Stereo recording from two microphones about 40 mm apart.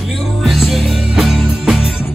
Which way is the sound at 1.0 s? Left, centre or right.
Centre.